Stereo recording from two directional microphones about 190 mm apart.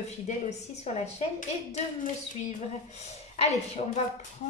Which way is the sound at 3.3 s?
35° left (ahead or behind).